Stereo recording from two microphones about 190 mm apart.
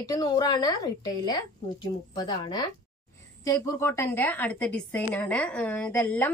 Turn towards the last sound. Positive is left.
turn(degrees=10)  # may be behind; listen again after turning